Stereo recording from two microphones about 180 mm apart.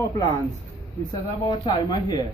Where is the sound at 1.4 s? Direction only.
25° left (ahead or behind).